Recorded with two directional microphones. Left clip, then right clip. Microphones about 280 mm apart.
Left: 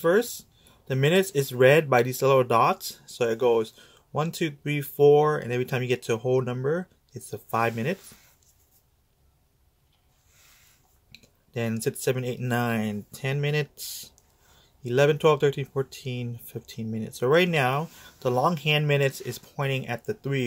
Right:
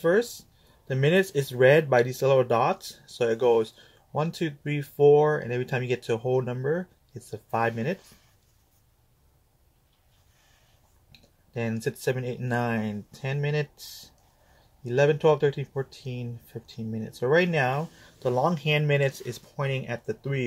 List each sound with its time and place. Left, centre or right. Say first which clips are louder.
0.0 s speech: left 1 dB; centre
11.1 s speech: left 5 dB; centre